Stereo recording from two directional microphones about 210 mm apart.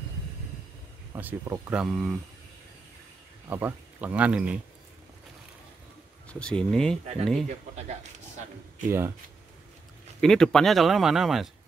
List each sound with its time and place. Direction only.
1.1 s speech: 10° right (ahead or behind)
3.4 s speech: 10° right (ahead or behind)
6.2 s speech: 5° left (ahead or behind)
7.4 s speech: 35° right (ahead or behind)
8.8 s speech: 10° right (ahead or behind)
10.2 s speech: 5° left (ahead or behind)